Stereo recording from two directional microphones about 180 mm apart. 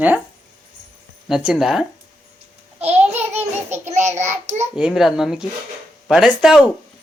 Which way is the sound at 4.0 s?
40° right (ahead or behind).